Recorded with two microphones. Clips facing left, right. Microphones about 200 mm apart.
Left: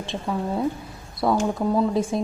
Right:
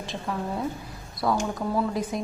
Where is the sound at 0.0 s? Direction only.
25° left (ahead or behind).